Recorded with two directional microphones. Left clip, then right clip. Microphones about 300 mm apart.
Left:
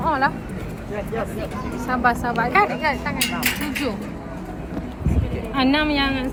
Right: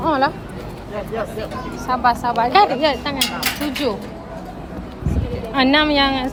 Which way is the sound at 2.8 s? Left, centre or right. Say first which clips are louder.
Right 4 dB; right.